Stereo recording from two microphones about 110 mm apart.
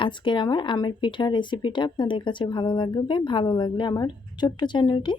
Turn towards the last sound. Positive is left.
turn(degrees=45)  # may be behind; listen again after turning